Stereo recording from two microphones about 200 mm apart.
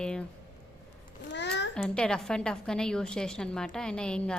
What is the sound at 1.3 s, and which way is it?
Speech, 60° left (ahead or behind).